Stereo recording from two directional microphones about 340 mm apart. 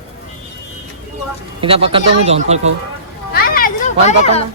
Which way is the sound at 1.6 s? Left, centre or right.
Centre.